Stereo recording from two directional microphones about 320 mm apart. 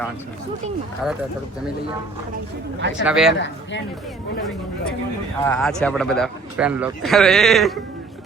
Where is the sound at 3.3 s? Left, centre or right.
Left.